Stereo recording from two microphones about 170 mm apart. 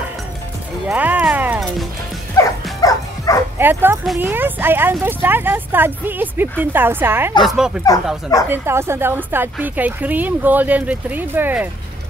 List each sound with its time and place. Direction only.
0.8 s music: 10° right (ahead or behind)
2.3 s dog: 20° left (ahead or behind)
3.5 s a woman's voice: 15° right (ahead or behind)
8.5 s a woman's voice: 15° right (ahead or behind)